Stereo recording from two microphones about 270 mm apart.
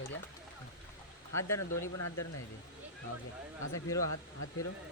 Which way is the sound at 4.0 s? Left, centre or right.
Left.